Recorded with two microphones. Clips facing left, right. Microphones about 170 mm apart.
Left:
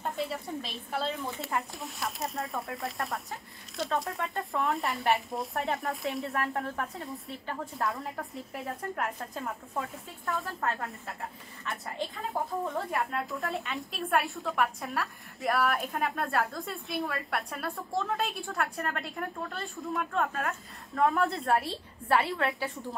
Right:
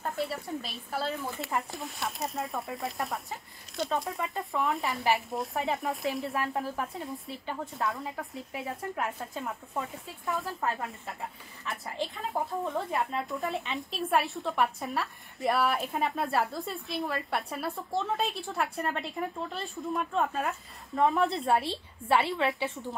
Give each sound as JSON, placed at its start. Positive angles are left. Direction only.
{"t": 0.0, "sound": "speech", "side_deg": 0}
{"t": 18.8, "sound": "a woman's voice", "side_deg": -20}
{"t": 19.7, "sound": "speech", "side_deg": 0}
{"t": 20.2, "sound": "speech", "side_deg": -15}
{"t": 22.1, "sound": "speech", "side_deg": 0}